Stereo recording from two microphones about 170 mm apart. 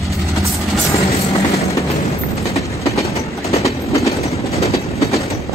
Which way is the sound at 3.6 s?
20° left (ahead or behind).